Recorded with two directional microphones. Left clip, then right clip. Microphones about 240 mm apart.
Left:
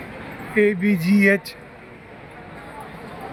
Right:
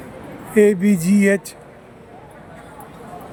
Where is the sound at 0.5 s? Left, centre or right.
Centre.